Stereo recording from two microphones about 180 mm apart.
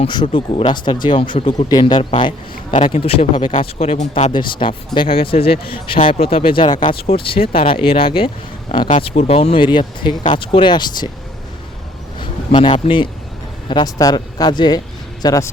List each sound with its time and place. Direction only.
0.0 s speech: 25° left (ahead or behind)
12.2 s a man's voice: 30° left (ahead or behind)